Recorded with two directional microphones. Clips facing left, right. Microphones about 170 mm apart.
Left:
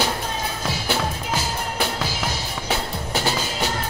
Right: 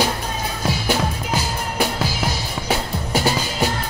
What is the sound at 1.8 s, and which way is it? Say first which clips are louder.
Music: right 5 dB; 10° right (ahead or behind).